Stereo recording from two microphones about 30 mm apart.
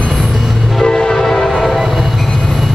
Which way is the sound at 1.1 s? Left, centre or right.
Centre.